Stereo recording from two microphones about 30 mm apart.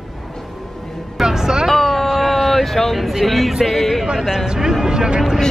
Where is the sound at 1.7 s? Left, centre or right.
Centre.